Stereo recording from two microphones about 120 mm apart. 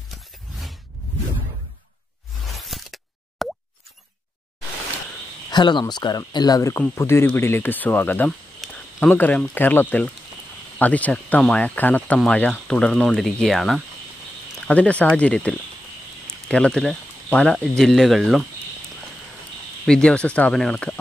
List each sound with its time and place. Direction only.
2.6 s plop: centre (ahead or behind)
5.5 s speech: 40° left (ahead or behind); by 8.3 s 15° left (ahead or behind)
8.3 s a sound: 5° left (ahead or behind)
9.1 s speech: 15° left (ahead or behind)
14.7 s speech: 10° left (ahead or behind)
19.9 s speech: 10° left (ahead or behind)